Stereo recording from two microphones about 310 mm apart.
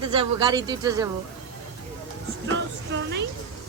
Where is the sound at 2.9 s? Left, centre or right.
Right.